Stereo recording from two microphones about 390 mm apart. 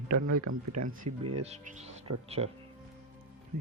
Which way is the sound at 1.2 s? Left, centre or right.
Centre.